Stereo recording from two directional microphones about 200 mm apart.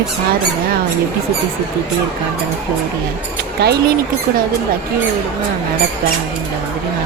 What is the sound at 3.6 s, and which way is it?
Speech, 55° right (ahead or behind).